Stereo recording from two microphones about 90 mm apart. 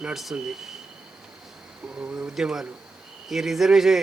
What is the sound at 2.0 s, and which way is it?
A man's voice, 10° right (ahead or behind).